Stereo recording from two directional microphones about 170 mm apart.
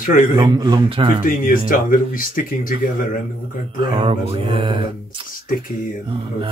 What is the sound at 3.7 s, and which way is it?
Speech, 30° right (ahead or behind).